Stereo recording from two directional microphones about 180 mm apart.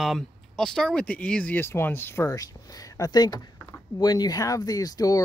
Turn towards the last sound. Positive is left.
turn(degrees=20)  # may be behind; listen again after turning